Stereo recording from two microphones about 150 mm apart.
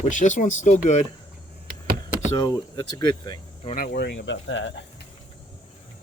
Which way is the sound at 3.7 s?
75° left (ahead or behind).